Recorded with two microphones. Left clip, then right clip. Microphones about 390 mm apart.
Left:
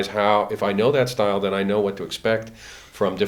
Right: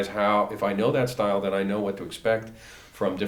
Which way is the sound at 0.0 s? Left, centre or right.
Left.